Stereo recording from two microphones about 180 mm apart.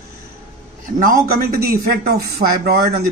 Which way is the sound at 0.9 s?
55° right (ahead or behind).